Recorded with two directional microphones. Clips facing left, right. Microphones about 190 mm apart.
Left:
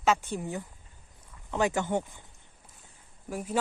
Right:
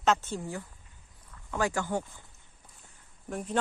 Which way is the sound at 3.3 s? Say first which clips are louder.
Even; 5° left (ahead or behind).